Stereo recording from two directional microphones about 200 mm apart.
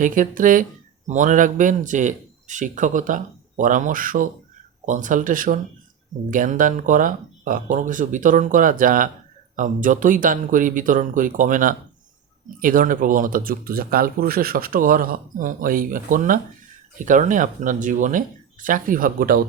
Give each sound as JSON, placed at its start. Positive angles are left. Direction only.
{"t": 0.0, "sound": "speech", "side_deg": -40}